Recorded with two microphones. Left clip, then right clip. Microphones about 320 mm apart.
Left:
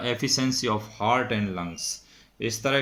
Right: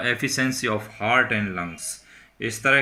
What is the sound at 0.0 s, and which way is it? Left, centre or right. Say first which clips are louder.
Speech: right 3 dB; centre.